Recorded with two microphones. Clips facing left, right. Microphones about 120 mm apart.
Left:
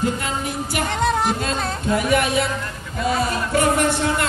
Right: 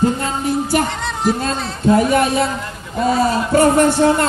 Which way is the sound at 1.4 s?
35° right (ahead or behind).